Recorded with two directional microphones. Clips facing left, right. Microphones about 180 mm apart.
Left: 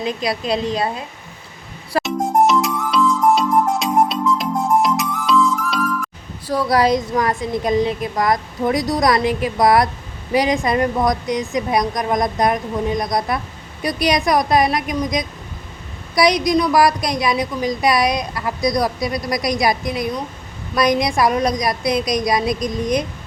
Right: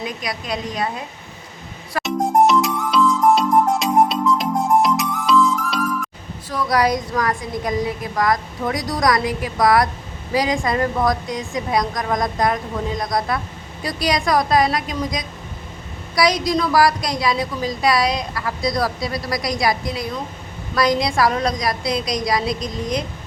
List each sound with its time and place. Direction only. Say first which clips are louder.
0.0 s a woman's voice: left 6 dB; 30° left (ahead or behind)
2.0 s music: right 1 dB; centre (ahead or behind)
6.5 s a woman's voice: left 3 dB; 30° left (ahead or behind)